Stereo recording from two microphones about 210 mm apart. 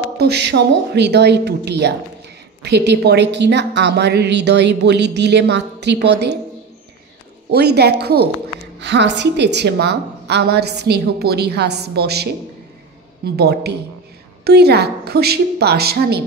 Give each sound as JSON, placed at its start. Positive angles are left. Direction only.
{"t": 0.2, "sound": "a woman's voice", "side_deg": -55}
{"t": 7.5, "sound": "a woman's voice", "side_deg": -50}